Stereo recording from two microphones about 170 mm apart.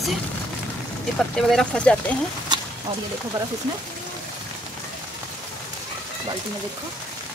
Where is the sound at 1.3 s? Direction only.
Centre (ahead or behind).